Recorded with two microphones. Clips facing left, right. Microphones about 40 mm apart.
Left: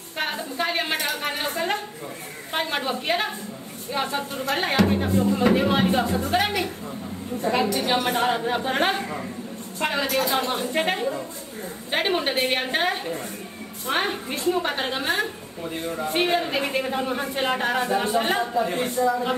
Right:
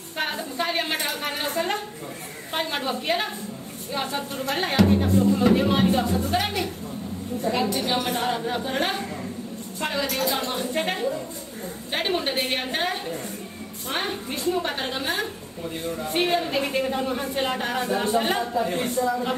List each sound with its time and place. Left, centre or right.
0.1 s a woman's voice: centre
6.2 s a woman's voice: left
7.7 s a woman's voice: left; by 19.3 s centre